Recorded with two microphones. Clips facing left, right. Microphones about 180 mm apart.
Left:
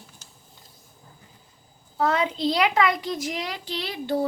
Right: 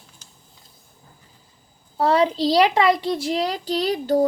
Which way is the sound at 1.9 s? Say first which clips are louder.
Right 5 dB; 35° right (ahead or behind).